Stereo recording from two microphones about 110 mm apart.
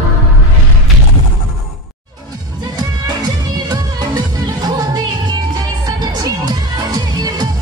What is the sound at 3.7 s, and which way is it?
Music, 35° right (ahead or behind).